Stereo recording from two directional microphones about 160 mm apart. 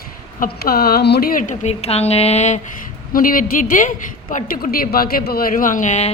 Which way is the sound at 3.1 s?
60° left (ahead or behind).